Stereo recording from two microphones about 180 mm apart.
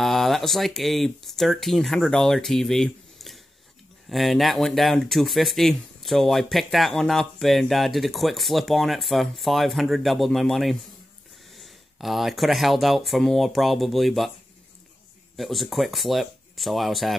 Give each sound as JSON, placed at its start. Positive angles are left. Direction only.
{"t": 0.0, "sound": "speech", "side_deg": 0}
{"t": 15.3, "sound": "speech", "side_deg": 0}